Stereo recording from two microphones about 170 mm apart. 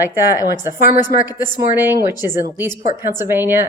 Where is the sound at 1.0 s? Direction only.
25° left (ahead or behind).